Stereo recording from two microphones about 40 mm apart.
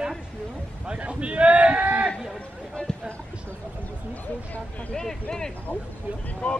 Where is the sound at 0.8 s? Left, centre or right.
Right.